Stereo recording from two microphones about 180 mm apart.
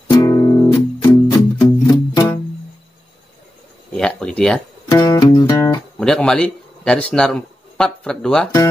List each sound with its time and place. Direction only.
0.1 s music: 20° left (ahead or behind)
3.9 s a sound: 5° left (ahead or behind)
4.8 s music: 20° left (ahead or behind)
5.9 s a man's voice: 5° left (ahead or behind)